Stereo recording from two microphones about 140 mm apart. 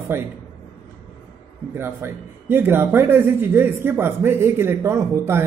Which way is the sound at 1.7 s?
15° right (ahead or behind).